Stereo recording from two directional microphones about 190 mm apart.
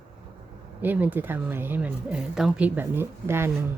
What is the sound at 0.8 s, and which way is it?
Speech, 10° right (ahead or behind).